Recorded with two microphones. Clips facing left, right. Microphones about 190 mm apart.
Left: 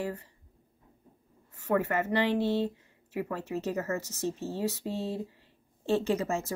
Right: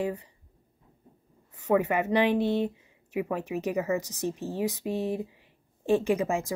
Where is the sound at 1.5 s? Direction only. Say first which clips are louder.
Right 4 dB; 15° right (ahead or behind).